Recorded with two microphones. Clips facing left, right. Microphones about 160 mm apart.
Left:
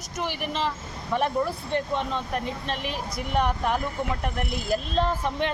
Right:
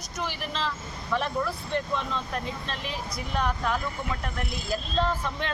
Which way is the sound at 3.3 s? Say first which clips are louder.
Left 3 dB; 15° left (ahead or behind).